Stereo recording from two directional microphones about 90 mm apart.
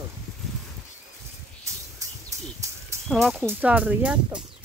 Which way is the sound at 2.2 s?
35° right (ahead or behind).